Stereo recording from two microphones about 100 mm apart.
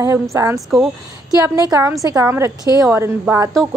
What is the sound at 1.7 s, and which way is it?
A woman's voice, 30° right (ahead or behind).